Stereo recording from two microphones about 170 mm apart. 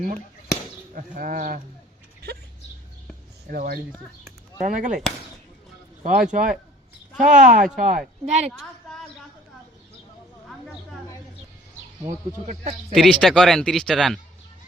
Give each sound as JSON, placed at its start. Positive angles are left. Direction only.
{"t": 0.9, "sound": "speech", "side_deg": -50}
{"t": 3.5, "sound": "a woman's voice", "side_deg": -60}
{"t": 4.6, "sound": "speech", "side_deg": -45}
{"t": 6.1, "sound": "a woman's voice", "side_deg": -50}
{"t": 12.0, "sound": "speech", "side_deg": -45}
{"t": 12.9, "sound": "speech", "side_deg": 5}